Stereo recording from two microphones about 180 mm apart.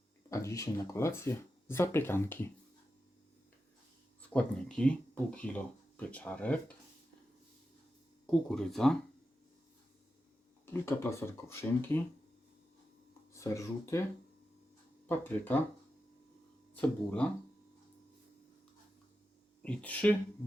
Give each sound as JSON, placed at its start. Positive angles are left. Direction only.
{"t": 0.3, "sound": "speech", "side_deg": 15}
{"t": 4.2, "sound": "speech", "side_deg": 5}
{"t": 8.3, "sound": "speech", "side_deg": 5}
{"t": 10.7, "sound": "speech", "side_deg": 15}
{"t": 13.3, "sound": "speech", "side_deg": 15}
{"t": 15.1, "sound": "speech", "side_deg": 10}
{"t": 16.7, "sound": "speech", "side_deg": 10}
{"t": 19.6, "sound": "speech", "side_deg": 5}